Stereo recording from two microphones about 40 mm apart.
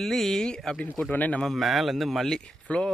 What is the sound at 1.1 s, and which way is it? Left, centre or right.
Speech, left.